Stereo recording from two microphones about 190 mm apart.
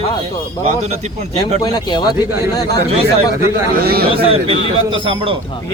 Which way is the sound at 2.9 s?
30° right (ahead or behind).